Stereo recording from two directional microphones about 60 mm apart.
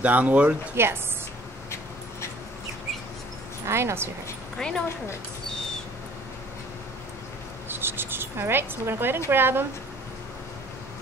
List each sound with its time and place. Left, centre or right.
0.0 s speech: right
0.8 s speech: right
3.6 s speech: right
4.6 s speech: centre
7.6 s cricket: right
9.3 s a woman's voice: right